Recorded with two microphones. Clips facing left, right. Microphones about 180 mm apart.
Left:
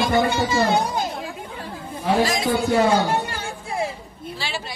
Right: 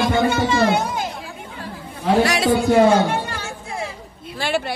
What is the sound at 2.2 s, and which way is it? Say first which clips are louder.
Speech: right 4 dB; 75° right (ahead or behind).